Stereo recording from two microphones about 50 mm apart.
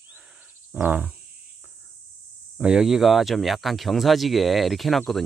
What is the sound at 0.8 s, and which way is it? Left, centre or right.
Cricket, right.